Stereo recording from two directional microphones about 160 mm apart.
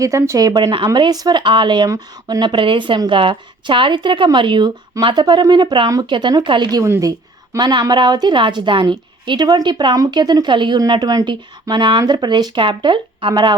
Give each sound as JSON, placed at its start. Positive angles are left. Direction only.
{"t": 0.0, "sound": "speech", "side_deg": -20}